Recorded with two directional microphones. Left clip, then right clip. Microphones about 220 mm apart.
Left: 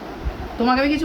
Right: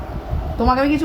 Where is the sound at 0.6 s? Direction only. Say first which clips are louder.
Right 2 dB; 25° right (ahead or behind).